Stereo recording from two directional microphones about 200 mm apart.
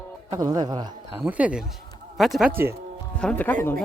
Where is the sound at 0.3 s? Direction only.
20° right (ahead or behind).